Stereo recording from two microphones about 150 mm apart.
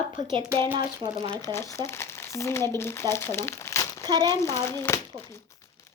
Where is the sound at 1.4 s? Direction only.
20° left (ahead or behind).